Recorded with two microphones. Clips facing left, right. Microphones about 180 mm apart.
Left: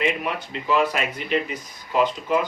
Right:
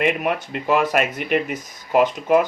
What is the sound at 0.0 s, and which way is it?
Speech, 50° right (ahead or behind).